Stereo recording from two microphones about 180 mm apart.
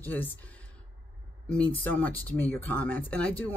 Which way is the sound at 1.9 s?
10° left (ahead or behind).